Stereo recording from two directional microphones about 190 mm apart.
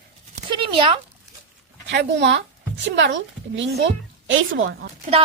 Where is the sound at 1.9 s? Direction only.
65° right (ahead or behind).